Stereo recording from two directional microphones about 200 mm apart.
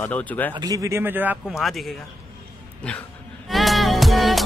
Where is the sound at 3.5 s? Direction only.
Centre (ahead or behind).